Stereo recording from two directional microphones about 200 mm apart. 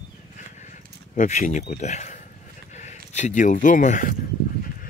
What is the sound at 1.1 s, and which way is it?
Speech, 35° left (ahead or behind).